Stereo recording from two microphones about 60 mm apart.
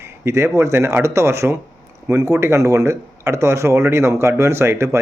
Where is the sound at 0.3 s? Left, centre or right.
Right.